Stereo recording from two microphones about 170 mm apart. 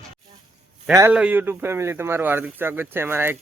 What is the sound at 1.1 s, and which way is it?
Speech, 10° right (ahead or behind).